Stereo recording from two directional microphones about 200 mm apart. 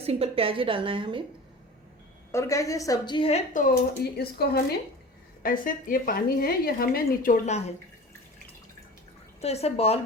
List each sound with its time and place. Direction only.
0.0 s a woman's voice: 30° right (ahead or behind)
2.3 s a woman's voice: 15° left (ahead or behind); by 7.7 s 35° left (ahead or behind)
9.4 s speech: 30° left (ahead or behind)